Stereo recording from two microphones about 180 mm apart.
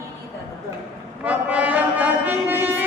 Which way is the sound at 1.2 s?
10° right (ahead or behind).